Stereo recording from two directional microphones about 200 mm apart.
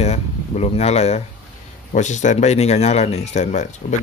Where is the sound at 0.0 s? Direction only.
30° left (ahead or behind).